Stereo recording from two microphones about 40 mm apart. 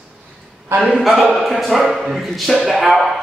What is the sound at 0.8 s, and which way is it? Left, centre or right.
Mantra, centre.